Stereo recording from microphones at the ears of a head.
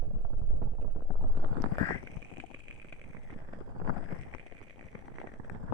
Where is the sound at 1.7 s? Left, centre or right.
Left.